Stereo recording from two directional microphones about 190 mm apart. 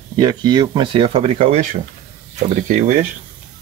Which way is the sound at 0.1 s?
20° right (ahead or behind).